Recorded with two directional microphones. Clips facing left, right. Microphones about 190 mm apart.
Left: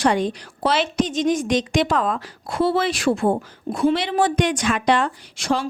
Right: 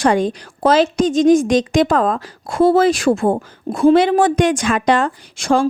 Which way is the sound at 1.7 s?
45° right (ahead or behind).